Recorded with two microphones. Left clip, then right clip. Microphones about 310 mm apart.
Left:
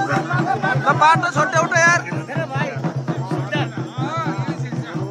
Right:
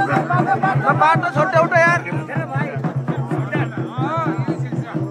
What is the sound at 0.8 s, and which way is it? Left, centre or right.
Music, centre.